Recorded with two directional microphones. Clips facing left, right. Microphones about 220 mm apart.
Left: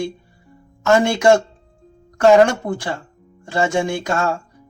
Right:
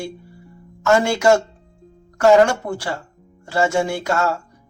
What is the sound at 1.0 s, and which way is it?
Speech, 20° left (ahead or behind).